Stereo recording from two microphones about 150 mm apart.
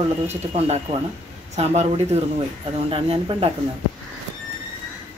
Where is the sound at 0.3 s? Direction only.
45° right (ahead or behind).